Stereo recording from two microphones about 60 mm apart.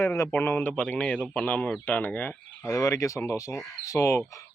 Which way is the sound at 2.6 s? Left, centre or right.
Left.